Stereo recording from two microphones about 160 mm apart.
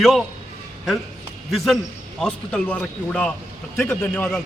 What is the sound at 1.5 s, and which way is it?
A man's voice, centre (ahead or behind).